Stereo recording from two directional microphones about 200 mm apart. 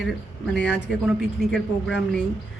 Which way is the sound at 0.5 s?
5° left (ahead or behind).